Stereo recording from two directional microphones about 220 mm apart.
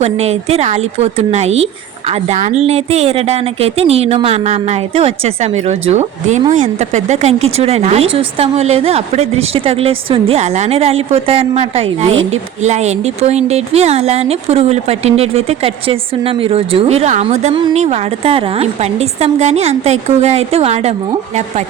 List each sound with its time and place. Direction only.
0.0 s speech: 30° right (ahead or behind)